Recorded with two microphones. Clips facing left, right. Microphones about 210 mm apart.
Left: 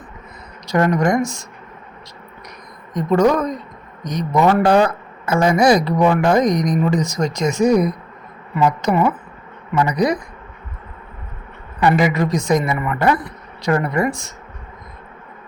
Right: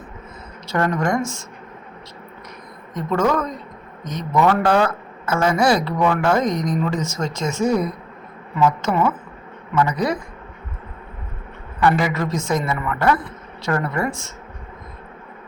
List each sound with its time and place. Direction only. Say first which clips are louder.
0.7 s speech: left 4 dB; 15° left (ahead or behind)
2.9 s speech: left 5 dB; 15° left (ahead or behind)
11.8 s speech: left 3 dB; 15° left (ahead or behind)